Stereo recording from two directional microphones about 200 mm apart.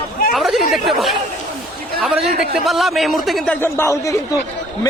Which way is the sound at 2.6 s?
Centre (ahead or behind).